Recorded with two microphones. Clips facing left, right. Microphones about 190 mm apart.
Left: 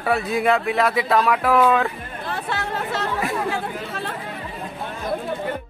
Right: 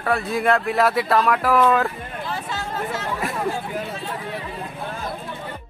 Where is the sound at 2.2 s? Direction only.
60° left (ahead or behind).